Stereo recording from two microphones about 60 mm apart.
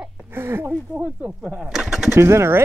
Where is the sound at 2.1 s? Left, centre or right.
Right.